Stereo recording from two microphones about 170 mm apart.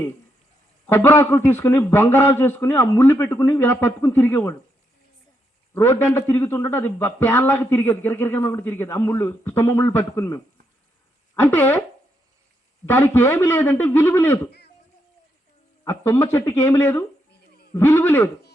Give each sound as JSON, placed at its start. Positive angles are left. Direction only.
{"t": 0.9, "sound": "a man's voice", "side_deg": 15}
{"t": 5.7, "sound": "a man's voice", "side_deg": 15}
{"t": 12.8, "sound": "a man's voice", "side_deg": 10}
{"t": 15.8, "sound": "a man's voice", "side_deg": 15}